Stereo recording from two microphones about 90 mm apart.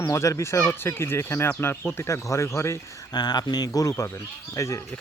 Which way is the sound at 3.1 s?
50° left (ahead or behind).